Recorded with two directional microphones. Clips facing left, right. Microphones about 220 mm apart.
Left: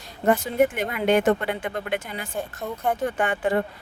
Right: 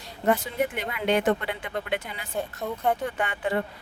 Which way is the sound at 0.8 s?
45° left (ahead or behind).